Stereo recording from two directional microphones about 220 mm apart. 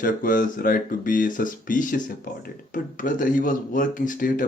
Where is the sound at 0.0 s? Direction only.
40° left (ahead or behind).